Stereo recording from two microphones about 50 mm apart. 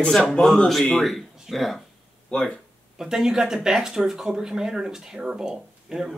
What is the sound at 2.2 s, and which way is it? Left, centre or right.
Speech, centre.